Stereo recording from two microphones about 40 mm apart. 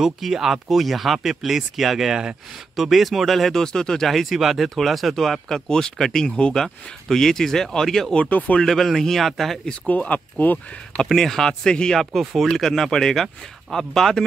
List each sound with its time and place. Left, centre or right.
0.2 s speech: centre
3.6 s speech: centre
4.1 s speech: centre
6.3 s speech: left
6.6 s speech: centre
8.3 s speech: left
8.6 s speech: centre
9.8 s speech: left
11.1 s speech: centre
12.0 s speech: centre